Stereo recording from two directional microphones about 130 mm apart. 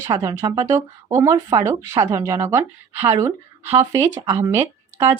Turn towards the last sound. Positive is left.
turn(degrees=-20)  # may be behind; listen again after turning